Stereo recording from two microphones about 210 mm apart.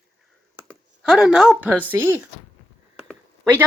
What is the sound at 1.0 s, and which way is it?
Speech, 5° right (ahead or behind).